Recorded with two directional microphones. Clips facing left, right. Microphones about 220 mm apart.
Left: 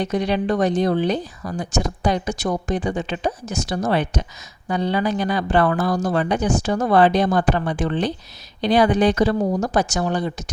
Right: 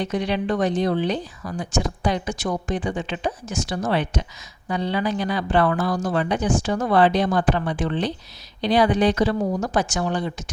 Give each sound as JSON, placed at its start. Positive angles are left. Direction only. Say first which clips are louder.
{"t": 0.0, "sound": "speech", "louder": "left 3 dB", "side_deg": 40}